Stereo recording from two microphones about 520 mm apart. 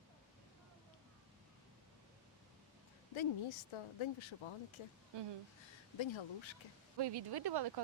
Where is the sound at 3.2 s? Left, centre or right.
Left.